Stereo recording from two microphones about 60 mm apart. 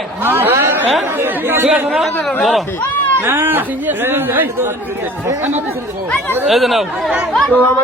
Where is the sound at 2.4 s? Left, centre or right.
Centre.